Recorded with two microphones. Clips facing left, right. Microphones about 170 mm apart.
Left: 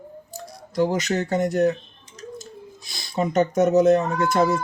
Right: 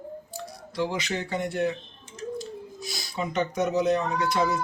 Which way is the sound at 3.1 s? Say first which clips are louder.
Left 7 dB; 45° left (ahead or behind).